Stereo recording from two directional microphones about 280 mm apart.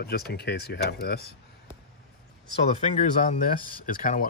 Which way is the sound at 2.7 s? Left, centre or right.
Left.